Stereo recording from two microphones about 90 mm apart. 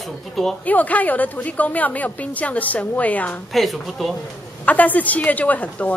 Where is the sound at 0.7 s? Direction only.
15° left (ahead or behind).